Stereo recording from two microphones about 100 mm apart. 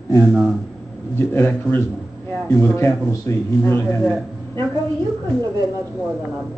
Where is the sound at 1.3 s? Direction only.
25° left (ahead or behind).